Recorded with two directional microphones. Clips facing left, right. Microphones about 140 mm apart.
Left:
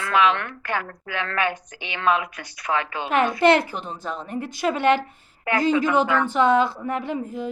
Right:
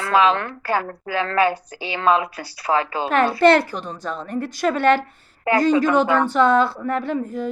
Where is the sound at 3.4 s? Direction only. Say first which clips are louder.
Right 4 dB; 15° left (ahead or behind).